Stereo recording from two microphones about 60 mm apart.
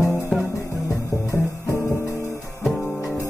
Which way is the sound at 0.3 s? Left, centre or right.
Centre.